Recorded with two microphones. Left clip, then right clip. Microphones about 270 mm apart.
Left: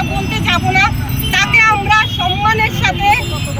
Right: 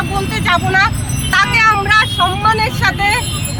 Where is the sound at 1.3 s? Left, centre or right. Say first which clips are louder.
Even; centre.